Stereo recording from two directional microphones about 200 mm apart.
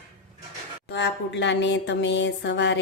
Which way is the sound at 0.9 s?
60° left (ahead or behind).